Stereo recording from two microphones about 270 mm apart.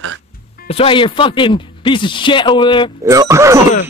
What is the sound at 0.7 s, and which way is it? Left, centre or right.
Speech, centre.